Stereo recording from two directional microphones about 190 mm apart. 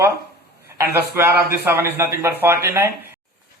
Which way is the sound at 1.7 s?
10° right (ahead or behind).